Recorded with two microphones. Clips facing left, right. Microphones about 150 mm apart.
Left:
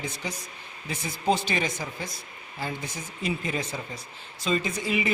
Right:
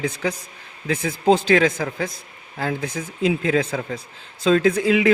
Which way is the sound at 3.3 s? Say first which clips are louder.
Right 9 dB; 90° right.